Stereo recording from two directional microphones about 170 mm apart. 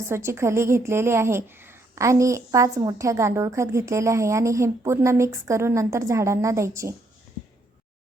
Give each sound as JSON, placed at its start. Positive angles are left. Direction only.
{"t": 0.1, "sound": "a woman's voice", "side_deg": -15}